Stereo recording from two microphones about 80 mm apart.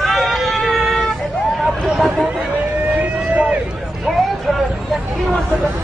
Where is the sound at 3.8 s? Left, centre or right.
Centre.